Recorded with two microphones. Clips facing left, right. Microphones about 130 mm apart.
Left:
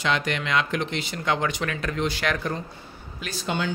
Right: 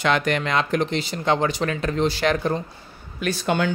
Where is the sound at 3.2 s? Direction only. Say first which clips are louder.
Right 6 dB; 60° right (ahead or behind).